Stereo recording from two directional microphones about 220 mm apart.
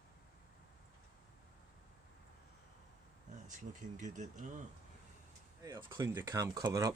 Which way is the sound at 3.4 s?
35° right (ahead or behind).